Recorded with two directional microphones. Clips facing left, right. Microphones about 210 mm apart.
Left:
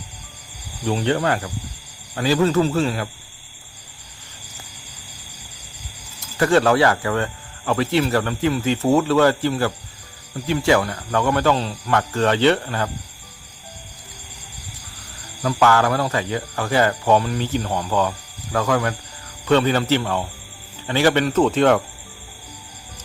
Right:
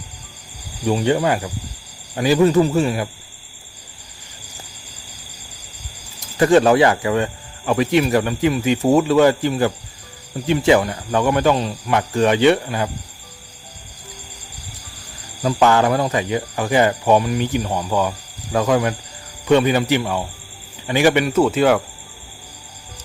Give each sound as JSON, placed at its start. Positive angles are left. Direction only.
{"t": 0.9, "sound": "speech", "side_deg": -10}
{"t": 6.1, "sound": "speech", "side_deg": -15}
{"t": 15.4, "sound": "speech", "side_deg": -20}